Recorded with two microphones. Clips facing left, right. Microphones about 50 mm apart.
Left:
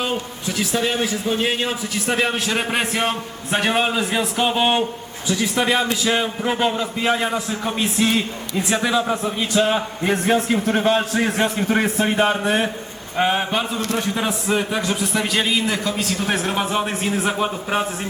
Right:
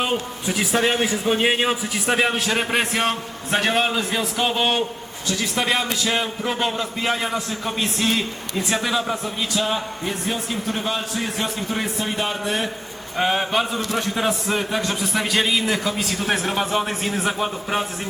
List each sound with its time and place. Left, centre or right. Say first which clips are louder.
0.0 s a man's voice: right 1 dB; centre
9.2 s speech: left 5 dB; left
10.1 s a man's voice: left 9 dB; left
13.1 s a man's voice: left 1 dB; centre